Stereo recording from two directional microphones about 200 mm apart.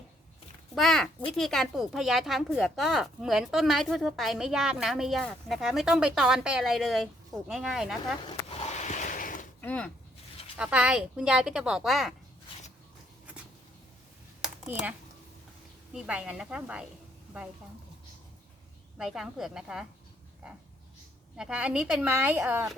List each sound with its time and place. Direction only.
0.8 s speech: centre (ahead or behind)
8.2 s a sound: 30° left (ahead or behind)
9.6 s speech: 5° left (ahead or behind)
10.6 s speech: 5° right (ahead or behind)
14.4 s computer keyboard: 5° right (ahead or behind)
15.9 s speech: 5° right (ahead or behind)
18.9 s speech: centre (ahead or behind)
21.3 s speech: 5° right (ahead or behind)